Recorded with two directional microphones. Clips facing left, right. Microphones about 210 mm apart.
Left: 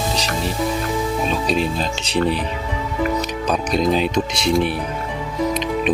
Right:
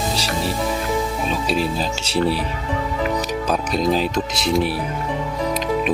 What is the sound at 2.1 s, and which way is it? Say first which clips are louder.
Speech: even; 5° right (ahead or behind).